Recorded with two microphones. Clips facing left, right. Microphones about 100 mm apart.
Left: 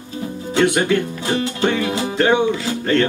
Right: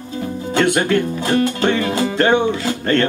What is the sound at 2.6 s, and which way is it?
Speech, 50° right (ahead or behind).